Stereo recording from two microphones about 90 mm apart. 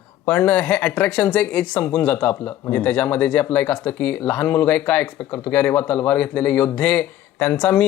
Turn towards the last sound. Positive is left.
turn(degrees=15)  # may be behind; listen again after turning